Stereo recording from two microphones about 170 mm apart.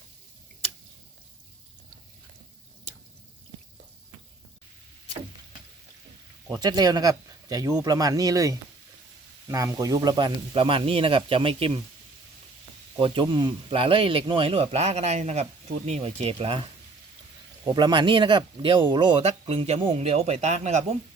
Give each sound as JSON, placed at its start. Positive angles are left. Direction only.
{"t": 6.5, "sound": "speech", "side_deg": -25}
{"t": 13.0, "sound": "speech", "side_deg": -30}
{"t": 17.7, "sound": "speech", "side_deg": -25}